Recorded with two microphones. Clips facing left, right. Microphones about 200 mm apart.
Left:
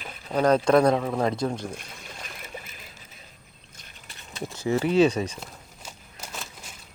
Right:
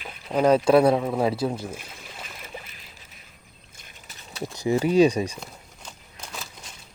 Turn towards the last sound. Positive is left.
turn(degrees=5)  # may be behind; listen again after turning